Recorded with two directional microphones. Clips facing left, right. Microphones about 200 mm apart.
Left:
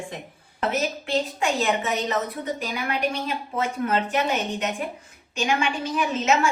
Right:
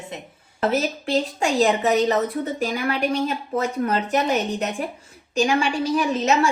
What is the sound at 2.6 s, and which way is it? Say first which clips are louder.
Speech: right 6 dB; 45° right (ahead or behind).